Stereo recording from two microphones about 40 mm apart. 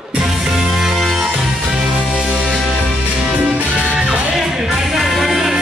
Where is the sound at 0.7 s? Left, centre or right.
Centre.